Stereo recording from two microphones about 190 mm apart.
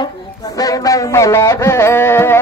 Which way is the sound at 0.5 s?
20° left (ahead or behind).